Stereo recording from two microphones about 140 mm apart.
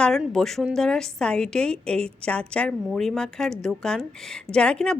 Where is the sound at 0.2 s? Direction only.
5° left (ahead or behind).